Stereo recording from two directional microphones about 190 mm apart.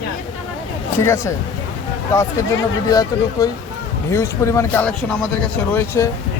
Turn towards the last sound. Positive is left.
turn(degrees=15)  # may be behind; listen again after turning